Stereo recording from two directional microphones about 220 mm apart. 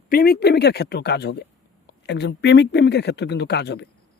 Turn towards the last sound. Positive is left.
turn(degrees=50)  # may be behind; listen again after turning